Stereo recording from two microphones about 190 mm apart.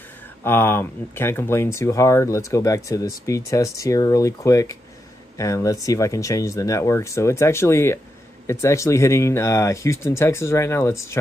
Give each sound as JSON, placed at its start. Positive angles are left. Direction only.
{"t": 0.4, "sound": "speech", "side_deg": 10}